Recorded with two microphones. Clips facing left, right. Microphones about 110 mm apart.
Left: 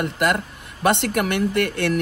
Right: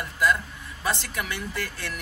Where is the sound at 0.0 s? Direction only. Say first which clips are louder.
Left 4 dB; 70° left (ahead or behind).